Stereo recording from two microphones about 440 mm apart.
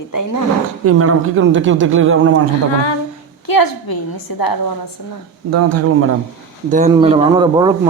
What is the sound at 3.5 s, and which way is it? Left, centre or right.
A woman's voice, left.